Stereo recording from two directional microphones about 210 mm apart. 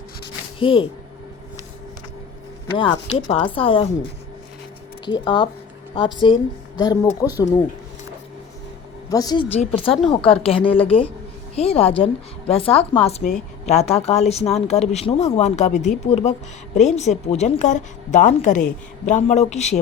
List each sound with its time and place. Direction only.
0.6 s a woman's voice: 25° left (ahead or behind)
2.7 s a woman's voice: 25° left (ahead or behind)
5.0 s a woman's voice: 20° left (ahead or behind)
9.0 s a woman's voice: 20° left (ahead or behind)